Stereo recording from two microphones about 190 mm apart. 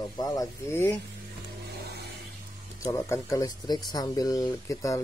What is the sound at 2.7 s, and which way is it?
Speech, 15° left (ahead or behind).